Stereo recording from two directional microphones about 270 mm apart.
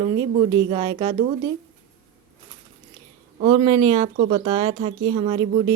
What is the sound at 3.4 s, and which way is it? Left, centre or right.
Speech, centre.